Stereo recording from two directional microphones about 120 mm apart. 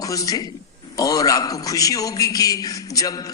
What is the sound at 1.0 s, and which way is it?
A man's voice, 30° left (ahead or behind).